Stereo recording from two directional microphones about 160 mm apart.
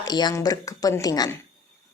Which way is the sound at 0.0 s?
25° left (ahead or behind).